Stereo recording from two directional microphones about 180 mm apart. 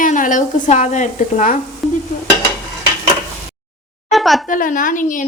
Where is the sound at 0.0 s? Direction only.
45° left (ahead or behind).